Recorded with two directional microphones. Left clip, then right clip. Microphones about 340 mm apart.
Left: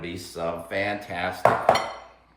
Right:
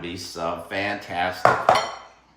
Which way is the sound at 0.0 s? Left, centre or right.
Centre.